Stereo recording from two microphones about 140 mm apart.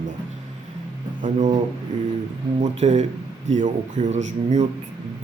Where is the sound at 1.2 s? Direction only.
60° right (ahead or behind).